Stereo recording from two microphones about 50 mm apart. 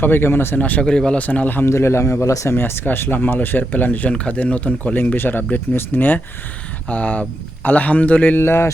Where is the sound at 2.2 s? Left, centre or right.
Left.